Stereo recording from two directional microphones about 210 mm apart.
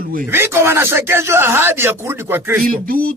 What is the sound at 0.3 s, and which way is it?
Speech, 10° right (ahead or behind).